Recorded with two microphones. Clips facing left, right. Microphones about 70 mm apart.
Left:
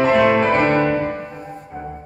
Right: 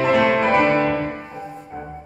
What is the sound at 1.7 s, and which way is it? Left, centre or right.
Music, centre.